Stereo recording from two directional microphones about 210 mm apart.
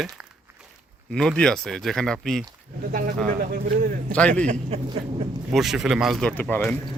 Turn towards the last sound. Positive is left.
turn(degrees=10)  # may be behind; listen again after turning